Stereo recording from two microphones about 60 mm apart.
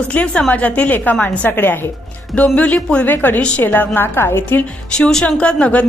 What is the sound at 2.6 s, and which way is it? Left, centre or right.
A woman's voice, left.